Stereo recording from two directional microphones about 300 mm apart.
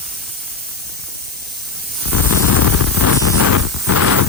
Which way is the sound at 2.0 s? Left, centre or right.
Left.